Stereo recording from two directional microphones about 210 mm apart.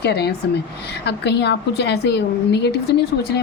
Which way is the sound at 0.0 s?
50° left (ahead or behind).